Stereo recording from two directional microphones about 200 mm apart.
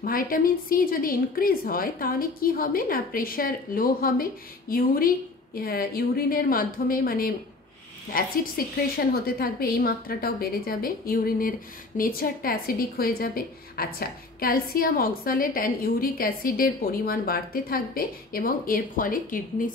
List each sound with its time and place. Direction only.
0.0 s a woman's voice: 45° left (ahead or behind)